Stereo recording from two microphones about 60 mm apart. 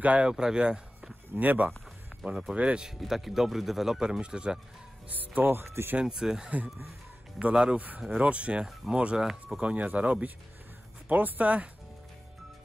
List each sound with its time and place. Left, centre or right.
0.0 s speech: right
0.3 s speech: centre
1.3 s speech: right
2.2 s speech: centre
3.0 s speech: centre
5.0 s speech: right
5.9 s speech: centre
7.5 s speech: centre
8.6 s speech: centre
9.6 s speech: right